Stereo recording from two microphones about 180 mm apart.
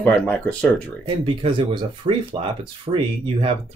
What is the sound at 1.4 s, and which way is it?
Speech, 30° right (ahead or behind).